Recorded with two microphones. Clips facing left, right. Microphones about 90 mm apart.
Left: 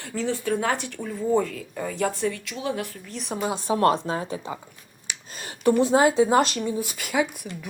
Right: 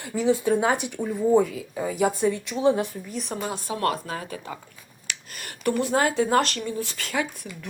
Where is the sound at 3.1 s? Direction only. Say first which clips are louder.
Even; centre (ahead or behind).